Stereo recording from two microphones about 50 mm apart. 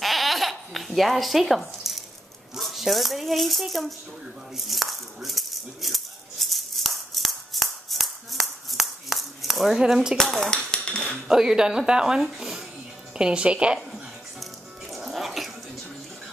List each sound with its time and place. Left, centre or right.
0.0 s babbling: centre
2.5 s speech: centre
4.6 s rattle: centre
10.1 s speech: centre
10.5 s dishes: centre
11.2 s a woman's voice: centre
13.2 s speech: right
14.9 s music: centre